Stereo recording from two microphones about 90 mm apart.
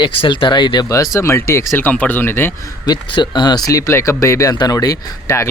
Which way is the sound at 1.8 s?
20° left (ahead or behind).